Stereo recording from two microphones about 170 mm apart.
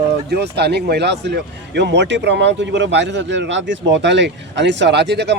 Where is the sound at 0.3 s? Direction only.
75° right (ahead or behind).